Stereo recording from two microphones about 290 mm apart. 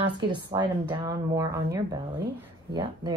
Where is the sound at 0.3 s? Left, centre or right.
Centre.